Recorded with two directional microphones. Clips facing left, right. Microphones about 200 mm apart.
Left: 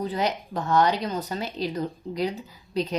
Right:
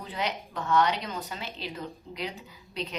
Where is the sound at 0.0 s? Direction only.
40° left (ahead or behind).